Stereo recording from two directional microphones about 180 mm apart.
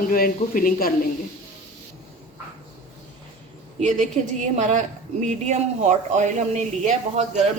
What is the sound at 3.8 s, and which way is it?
A man's voice, 40° right (ahead or behind).